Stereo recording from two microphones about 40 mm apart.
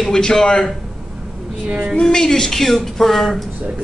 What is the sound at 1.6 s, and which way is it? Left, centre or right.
Speech, right.